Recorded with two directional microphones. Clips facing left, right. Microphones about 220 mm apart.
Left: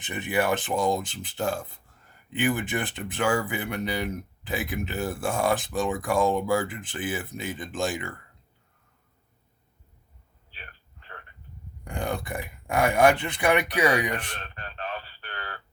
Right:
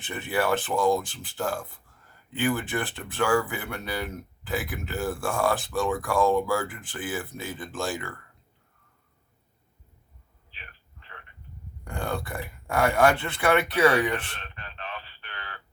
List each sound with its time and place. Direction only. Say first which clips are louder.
0.0 s speech: left 1 dB; 15° left (ahead or behind)
11.9 s speech: left 1 dB; 20° left (ahead or behind)
14.3 s a sound: left 3 dB; 40° left (ahead or behind)